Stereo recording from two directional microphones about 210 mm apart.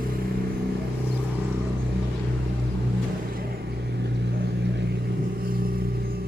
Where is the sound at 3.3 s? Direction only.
50° right (ahead or behind).